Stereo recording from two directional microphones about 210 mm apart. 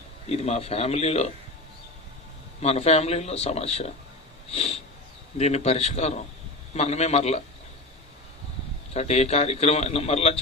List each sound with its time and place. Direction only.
0.3 s speech: 30° left (ahead or behind)
2.6 s a man's voice: 30° left (ahead or behind)
8.9 s a man's voice: 30° left (ahead or behind)